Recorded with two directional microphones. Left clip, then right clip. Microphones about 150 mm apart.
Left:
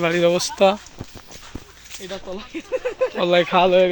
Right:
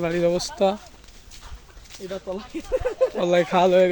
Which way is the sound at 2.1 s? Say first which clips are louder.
Right 1 dB; 30° left (ahead or behind).